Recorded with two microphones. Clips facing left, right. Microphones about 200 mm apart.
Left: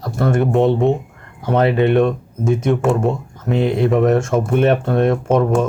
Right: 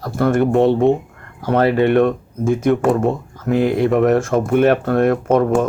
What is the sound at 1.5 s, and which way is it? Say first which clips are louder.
Speech: even; 20° left (ahead or behind).